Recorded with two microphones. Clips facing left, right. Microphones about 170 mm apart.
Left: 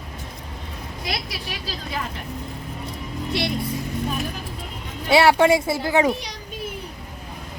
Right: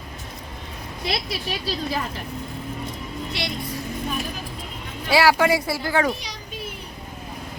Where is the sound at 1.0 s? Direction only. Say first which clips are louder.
Right 4 dB; 30° right (ahead or behind).